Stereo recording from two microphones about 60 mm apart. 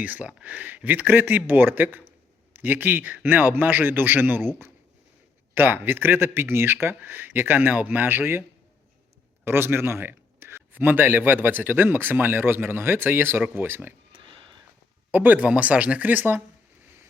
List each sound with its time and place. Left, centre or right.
0.0 s a man's voice: right
5.5 s a man's voice: right
15.1 s a man's voice: right